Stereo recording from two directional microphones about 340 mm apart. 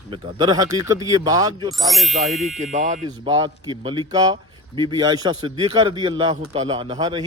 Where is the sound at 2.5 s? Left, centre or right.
Right.